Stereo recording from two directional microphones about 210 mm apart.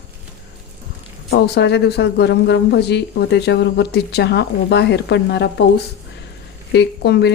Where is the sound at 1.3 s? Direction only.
55° left (ahead or behind).